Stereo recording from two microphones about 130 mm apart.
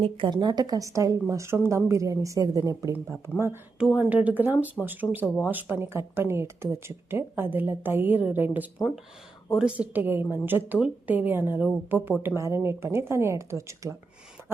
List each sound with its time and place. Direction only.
0.0 s a woman's voice: 40° right (ahead or behind); by 3.6 s 20° right (ahead or behind)
3.8 s a woman's voice: 10° right (ahead or behind)